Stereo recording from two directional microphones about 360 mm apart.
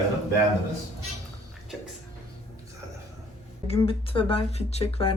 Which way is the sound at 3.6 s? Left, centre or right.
Centre.